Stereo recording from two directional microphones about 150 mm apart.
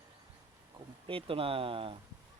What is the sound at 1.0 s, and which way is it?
Speech, 35° right (ahead or behind).